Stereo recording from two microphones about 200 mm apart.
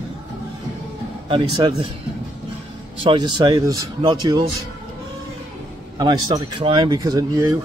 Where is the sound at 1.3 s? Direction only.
25° right (ahead or behind).